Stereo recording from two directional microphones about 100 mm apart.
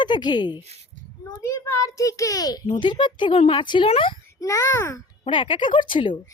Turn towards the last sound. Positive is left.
turn(degrees=55)  # may be behind; listen again after turning